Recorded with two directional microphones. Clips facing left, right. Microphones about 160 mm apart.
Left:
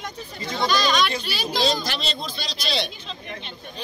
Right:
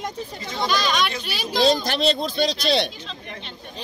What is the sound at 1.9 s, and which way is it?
Speech, 55° right (ahead or behind).